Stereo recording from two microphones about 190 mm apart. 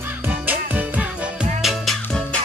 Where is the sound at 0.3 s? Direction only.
10° right (ahead or behind).